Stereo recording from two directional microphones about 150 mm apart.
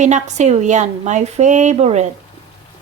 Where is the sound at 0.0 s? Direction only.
50° right (ahead or behind).